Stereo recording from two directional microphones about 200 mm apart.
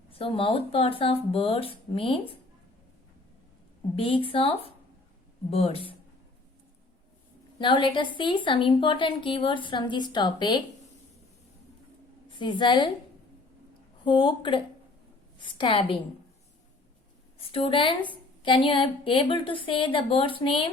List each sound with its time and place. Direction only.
0.1 s a woman's voice: 30° left (ahead or behind)
3.9 s a woman's voice: 30° left (ahead or behind)
7.6 s a woman's voice: 25° left (ahead or behind)
12.4 s a woman's voice: 25° left (ahead or behind)
14.0 s a woman's voice: 25° left (ahead or behind)
17.5 s a woman's voice: 25° left (ahead or behind)